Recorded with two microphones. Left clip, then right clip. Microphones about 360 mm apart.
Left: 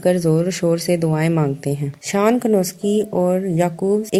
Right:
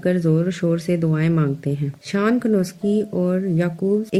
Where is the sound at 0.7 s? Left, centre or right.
Centre.